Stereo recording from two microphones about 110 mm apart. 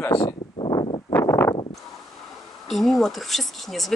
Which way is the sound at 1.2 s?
30° left (ahead or behind).